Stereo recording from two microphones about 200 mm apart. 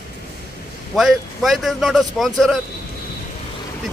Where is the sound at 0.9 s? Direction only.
Centre (ahead or behind).